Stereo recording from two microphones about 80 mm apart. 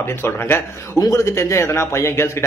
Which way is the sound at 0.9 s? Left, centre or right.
Left.